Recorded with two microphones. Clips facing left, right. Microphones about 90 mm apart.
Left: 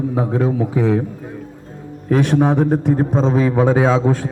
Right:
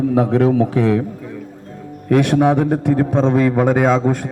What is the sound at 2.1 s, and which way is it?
A man's voice, 70° right (ahead or behind).